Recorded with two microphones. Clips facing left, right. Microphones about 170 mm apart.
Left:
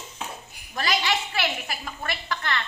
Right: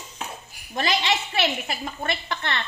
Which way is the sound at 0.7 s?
25° right (ahead or behind).